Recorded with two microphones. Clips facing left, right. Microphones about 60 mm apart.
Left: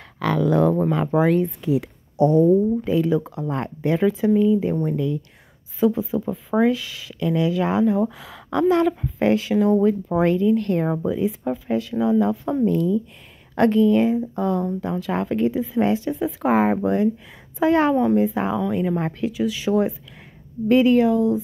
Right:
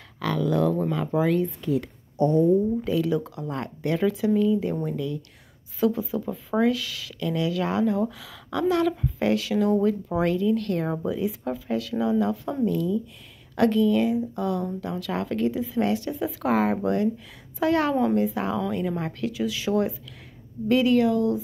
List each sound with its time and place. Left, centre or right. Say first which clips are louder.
0.2 s speech: left 5 dB; left
2.8 s speech: left 4 dB; left
3.8 s speech: left 4 dB; centre
5.8 s speech: left 4 dB; centre
8.2 s speech: left 5 dB; left
11.4 s speech: left 4 dB; centre
12.6 s speech: left 4 dB; left; by 18.9 s centre
19.3 s speech: left 4 dB; centre
20.6 s speech: left 4 dB; left